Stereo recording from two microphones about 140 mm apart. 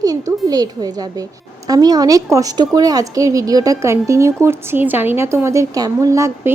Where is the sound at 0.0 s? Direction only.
25° right (ahead or behind).